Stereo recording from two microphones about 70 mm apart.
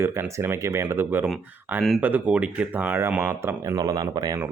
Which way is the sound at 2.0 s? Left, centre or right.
Right.